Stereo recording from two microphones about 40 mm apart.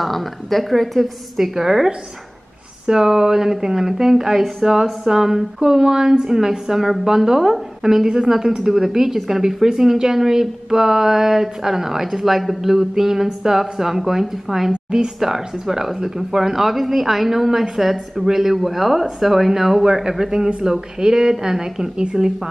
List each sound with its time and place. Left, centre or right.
0.0 s a woman's voice: centre
2.9 s a woman's voice: centre
14.7 s speech: right
15.1 s a woman's voice: centre